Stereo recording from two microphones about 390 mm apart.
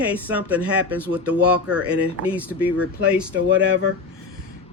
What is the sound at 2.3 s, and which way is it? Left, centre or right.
Speech, centre.